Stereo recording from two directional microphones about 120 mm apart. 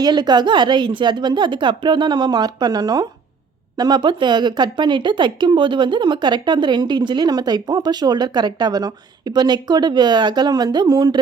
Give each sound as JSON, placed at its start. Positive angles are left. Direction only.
{"t": 0.0, "sound": "speech", "side_deg": -35}